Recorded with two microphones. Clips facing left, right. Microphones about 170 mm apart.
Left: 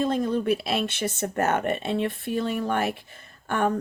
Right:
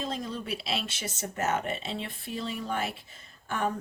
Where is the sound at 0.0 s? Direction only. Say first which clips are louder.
Left 10 dB; 55° left (ahead or behind).